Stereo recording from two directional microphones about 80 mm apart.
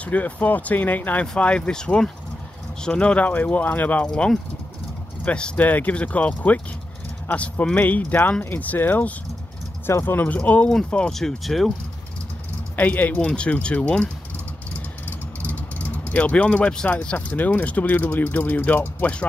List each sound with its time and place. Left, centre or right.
0.0 s speech: centre
4.1 s speech: centre
12.7 s speech: left